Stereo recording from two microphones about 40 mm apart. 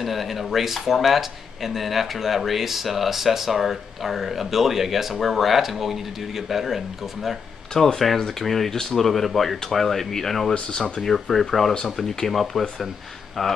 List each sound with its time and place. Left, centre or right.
0.0 s speech: centre
7.7 s speech: centre
10.5 s speech: left
11.0 s speech: centre